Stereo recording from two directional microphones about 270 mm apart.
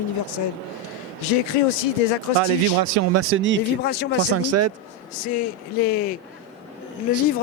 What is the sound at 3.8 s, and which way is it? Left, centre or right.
Speech, left.